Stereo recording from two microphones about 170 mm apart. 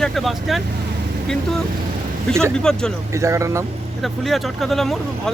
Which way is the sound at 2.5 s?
5° left (ahead or behind).